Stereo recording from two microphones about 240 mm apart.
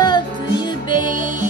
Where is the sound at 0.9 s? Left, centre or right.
Right.